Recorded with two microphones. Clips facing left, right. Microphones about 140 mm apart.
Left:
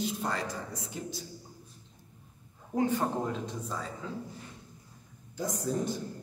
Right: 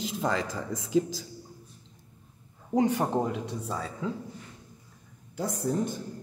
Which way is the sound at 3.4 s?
75° right (ahead or behind).